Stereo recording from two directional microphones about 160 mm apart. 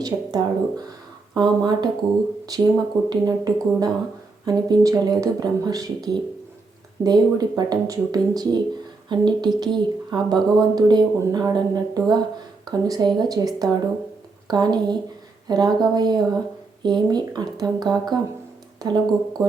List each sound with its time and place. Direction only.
0.0 s speech: 25° right (ahead or behind)